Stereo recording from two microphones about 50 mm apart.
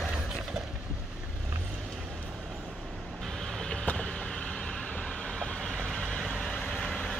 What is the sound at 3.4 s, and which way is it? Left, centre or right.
Vehicle, centre.